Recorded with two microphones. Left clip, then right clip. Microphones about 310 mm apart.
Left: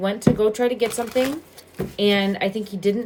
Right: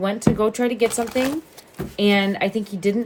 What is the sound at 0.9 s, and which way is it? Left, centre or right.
Speech, centre.